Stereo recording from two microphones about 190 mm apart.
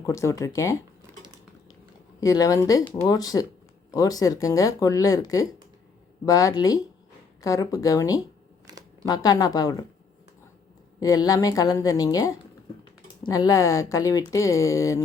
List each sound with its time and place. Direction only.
0.0 s speech: 15° left (ahead or behind)
2.2 s a woman's voice: 20° left (ahead or behind)
8.7 s a sound: 20° right (ahead or behind)
9.0 s a woman's voice: 20° left (ahead or behind)
11.0 s a woman's voice: 20° left (ahead or behind)